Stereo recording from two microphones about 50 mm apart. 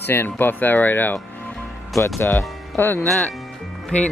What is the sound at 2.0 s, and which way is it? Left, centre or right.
Speech, left.